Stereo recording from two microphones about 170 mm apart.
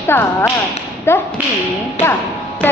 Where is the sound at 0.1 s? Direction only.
10° left (ahead or behind).